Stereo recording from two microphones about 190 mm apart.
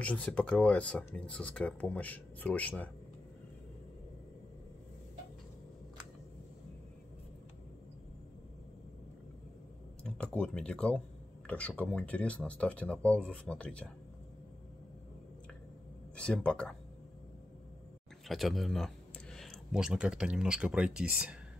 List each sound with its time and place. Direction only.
0.0 s speech: 5° left (ahead or behind)
10.0 s speech: 5° left (ahead or behind)
16.2 s speech: 5° left (ahead or behind)
18.3 s speech: centre (ahead or behind)